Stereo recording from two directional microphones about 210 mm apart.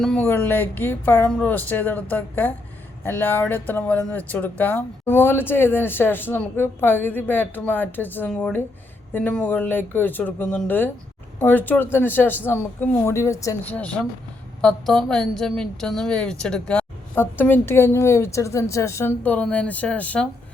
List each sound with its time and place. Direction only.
0.0 s a woman's voice: 5° left (ahead or behind)